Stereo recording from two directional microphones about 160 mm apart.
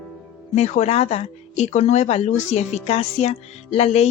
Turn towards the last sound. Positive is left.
turn(degrees=40)  # may be behind; listen again after turning